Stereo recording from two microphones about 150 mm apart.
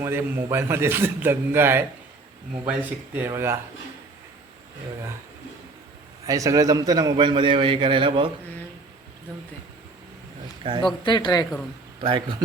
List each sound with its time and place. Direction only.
0.0 s a man's voice: 15° right (ahead or behind)
3.2 s a man's voice: 15° right (ahead or behind)
6.2 s a man's voice: 20° right (ahead or behind)
10.6 s a man's voice: 35° right (ahead or behind)
11.0 s speech: 30° left (ahead or behind)
12.0 s a man's voice: 35° right (ahead or behind)